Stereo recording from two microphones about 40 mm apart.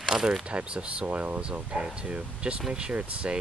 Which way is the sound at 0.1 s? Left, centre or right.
Centre.